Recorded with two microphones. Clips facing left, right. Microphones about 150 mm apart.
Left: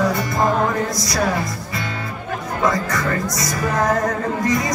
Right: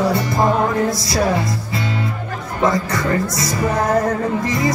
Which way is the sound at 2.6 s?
30° right (ahead or behind).